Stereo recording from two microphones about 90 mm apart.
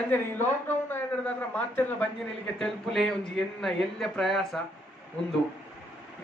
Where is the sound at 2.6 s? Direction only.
5° left (ahead or behind).